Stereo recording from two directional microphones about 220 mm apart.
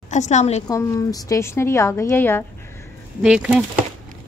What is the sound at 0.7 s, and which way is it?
A woman's voice, 15° left (ahead or behind).